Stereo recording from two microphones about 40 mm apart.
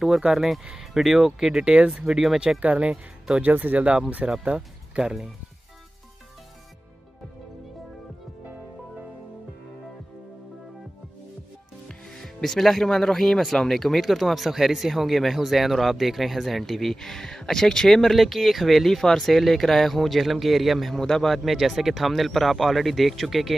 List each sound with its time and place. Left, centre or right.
0.0 s speech: centre
1.6 s speech: right
2.6 s speech: right
3.4 s speech: right
4.2 s speech: right
4.6 s speech: centre
12.1 s speech: centre
20.9 s speech: centre